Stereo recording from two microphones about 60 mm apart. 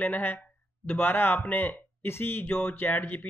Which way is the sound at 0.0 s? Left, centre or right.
Left.